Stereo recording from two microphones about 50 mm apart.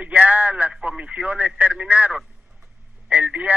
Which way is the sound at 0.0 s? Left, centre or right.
Right.